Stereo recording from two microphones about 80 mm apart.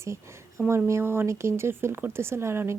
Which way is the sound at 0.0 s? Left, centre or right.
Right.